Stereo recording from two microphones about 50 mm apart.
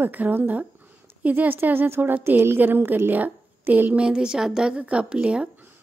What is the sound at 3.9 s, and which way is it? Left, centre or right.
A woman's voice, centre.